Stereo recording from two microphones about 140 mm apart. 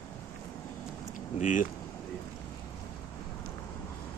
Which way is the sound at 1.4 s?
65° left (ahead or behind).